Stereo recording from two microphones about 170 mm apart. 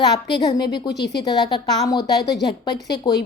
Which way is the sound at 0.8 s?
80° left.